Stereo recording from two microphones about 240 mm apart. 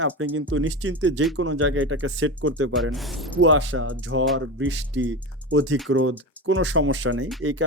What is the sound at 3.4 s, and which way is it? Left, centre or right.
Speech, right.